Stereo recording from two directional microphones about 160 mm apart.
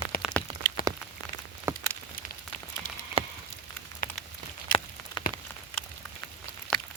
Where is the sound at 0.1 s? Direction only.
65° left (ahead or behind).